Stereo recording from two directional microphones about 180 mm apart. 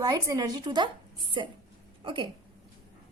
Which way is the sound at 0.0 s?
20° right (ahead or behind).